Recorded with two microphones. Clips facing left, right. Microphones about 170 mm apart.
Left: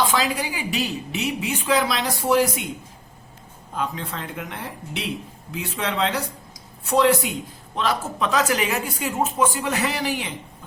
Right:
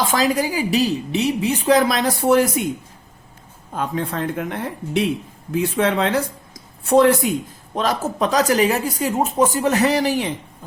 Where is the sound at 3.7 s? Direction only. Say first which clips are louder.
Right 5 dB; 50° right (ahead or behind).